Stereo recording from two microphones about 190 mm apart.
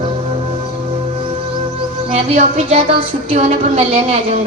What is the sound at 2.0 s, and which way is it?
Speech, 30° right (ahead or behind).